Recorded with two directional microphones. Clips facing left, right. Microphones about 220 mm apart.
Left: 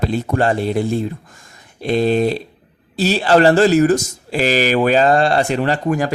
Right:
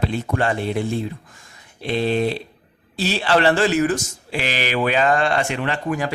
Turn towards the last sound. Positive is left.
turn(degrees=40)  # may be behind; listen again after turning